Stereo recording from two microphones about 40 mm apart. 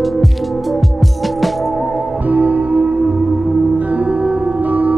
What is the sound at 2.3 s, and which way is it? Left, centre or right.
Music, right.